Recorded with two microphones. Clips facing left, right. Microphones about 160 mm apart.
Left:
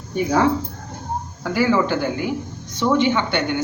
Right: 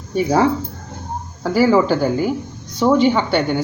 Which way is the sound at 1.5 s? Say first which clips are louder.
Right 4 dB; 40° right (ahead or behind).